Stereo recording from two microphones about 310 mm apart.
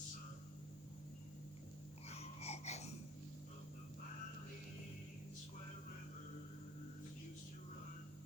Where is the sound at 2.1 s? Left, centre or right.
Centre.